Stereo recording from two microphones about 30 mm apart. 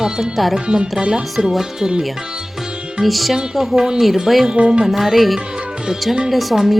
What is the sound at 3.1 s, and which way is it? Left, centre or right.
Music, centre.